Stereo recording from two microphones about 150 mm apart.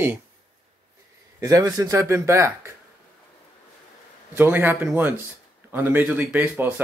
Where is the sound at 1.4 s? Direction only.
25° right (ahead or behind).